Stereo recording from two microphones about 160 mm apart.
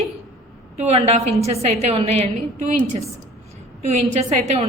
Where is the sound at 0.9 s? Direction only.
40° right (ahead or behind).